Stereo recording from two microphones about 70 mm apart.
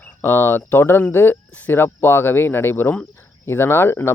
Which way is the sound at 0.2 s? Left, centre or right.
Left.